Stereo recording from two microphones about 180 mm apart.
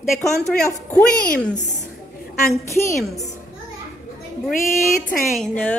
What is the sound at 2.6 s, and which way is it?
Speech, 15° left (ahead or behind).